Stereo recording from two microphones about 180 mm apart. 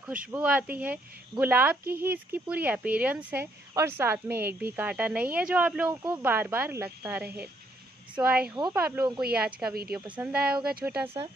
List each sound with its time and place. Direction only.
0.3 s speech: 10° right (ahead or behind)
10.7 s speech: 55° right (ahead or behind)